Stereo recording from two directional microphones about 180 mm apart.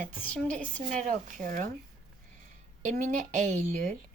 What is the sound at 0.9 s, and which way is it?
Speech, 45° right (ahead or behind).